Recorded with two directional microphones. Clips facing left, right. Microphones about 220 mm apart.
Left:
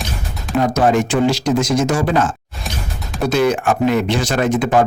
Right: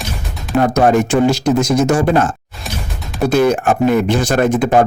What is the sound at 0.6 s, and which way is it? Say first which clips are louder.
Speech: right 3 dB; 50° right (ahead or behind).